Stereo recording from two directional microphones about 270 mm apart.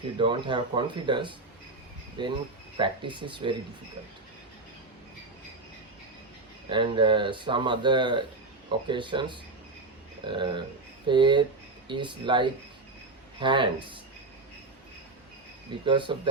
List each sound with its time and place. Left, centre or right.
0.2 s speech: centre
6.7 s speech: centre
15.8 s speech: centre